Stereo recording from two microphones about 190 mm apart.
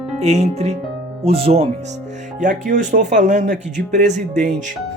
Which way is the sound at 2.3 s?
40° right (ahead or behind).